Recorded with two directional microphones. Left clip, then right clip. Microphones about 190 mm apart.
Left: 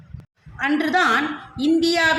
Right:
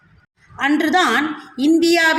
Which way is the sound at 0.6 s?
20° right (ahead or behind).